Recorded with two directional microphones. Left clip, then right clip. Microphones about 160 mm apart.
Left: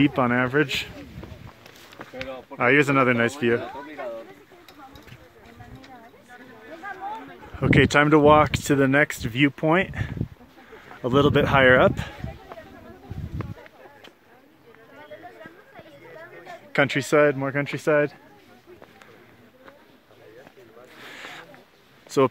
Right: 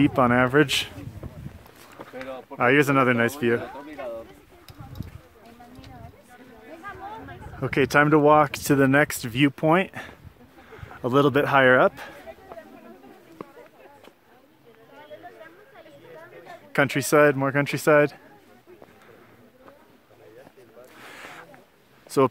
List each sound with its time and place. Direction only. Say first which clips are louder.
0.0 s a man's voice: right 2 dB; 10° right (ahead or behind); by 0.9 s 30° right (ahead or behind)
2.5 s speech: even; 10° right (ahead or behind)
3.6 s a sound: left 1 dB; 70° right (ahead or behind)
7.5 s speech: left 2 dB; 5° left (ahead or behind)
8.5 s speech: even; 10° right (ahead or behind)
15.7 s chatter: left 1 dB; 60° left (ahead or behind)
16.7 s speech: even; 10° right (ahead or behind)
17.3 s speech: right 2 dB; 35° right (ahead or behind)
21.0 s a sound: left 3 dB; 5° right (ahead or behind)